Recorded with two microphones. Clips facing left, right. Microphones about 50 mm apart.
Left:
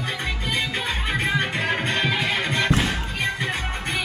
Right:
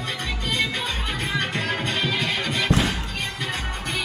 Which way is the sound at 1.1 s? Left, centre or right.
Centre.